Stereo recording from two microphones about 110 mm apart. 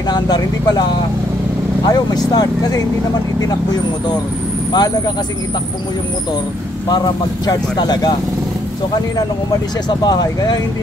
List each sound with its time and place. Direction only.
0.1 s speech: 40° left (ahead or behind)
1.9 s speech: 40° left (ahead or behind)
4.7 s speech: 40° left (ahead or behind)
7.4 s speech: 40° left (ahead or behind)
9.8 s speech: 40° left (ahead or behind)